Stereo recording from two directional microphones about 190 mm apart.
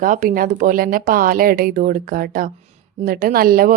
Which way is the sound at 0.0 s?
45° right (ahead or behind).